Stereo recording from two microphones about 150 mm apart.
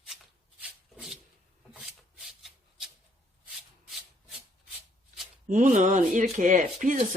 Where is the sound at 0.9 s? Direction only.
5° right (ahead or behind).